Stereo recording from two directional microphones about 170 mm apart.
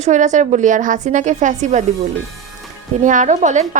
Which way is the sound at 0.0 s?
45° right (ahead or behind).